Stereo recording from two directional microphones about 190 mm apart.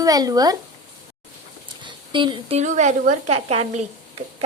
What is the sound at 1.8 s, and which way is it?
Speech, 25° right (ahead or behind).